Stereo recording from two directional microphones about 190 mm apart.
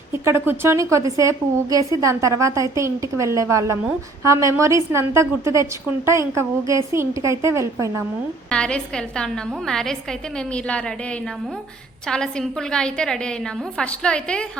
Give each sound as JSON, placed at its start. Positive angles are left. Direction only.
{"t": 0.1, "sound": "a woman's voice", "side_deg": -15}
{"t": 8.4, "sound": "a woman's voice", "side_deg": 5}
{"t": 12.0, "sound": "a woman's voice", "side_deg": 5}